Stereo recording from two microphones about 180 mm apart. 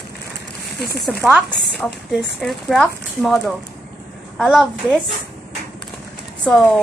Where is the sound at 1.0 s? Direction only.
Centre (ahead or behind).